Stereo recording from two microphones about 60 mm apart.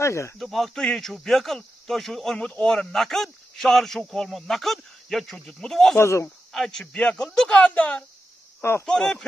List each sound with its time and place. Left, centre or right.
0.0 s speech: left
0.4 s speech: centre
2.6 s speech: centre
5.9 s speech: left
6.5 s speech: centre
7.5 s speech: left
8.8 s speech: centre